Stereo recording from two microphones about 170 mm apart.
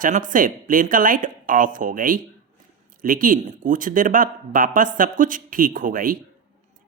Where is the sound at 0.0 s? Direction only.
50° right (ahead or behind).